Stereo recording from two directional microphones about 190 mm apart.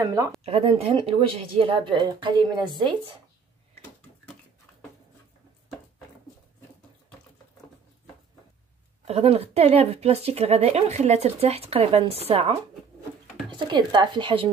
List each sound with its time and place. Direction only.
0.0 s speech: 15° right (ahead or behind)
0.4 s speech: 30° right (ahead or behind)
9.0 s speech: 30° right (ahead or behind)